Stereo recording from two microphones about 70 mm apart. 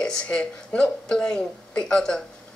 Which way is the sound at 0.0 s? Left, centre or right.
Centre.